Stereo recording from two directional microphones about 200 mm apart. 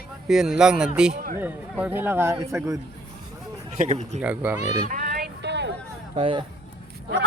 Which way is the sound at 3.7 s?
35° right (ahead or behind).